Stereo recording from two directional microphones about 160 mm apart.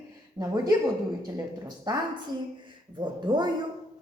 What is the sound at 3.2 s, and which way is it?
Speech, 25° right (ahead or behind).